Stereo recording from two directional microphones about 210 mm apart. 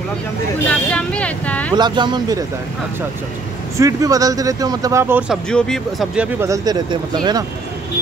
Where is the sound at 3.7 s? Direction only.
15° right (ahead or behind).